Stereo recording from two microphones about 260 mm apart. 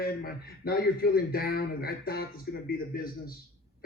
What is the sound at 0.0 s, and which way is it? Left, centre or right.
A man's voice, left.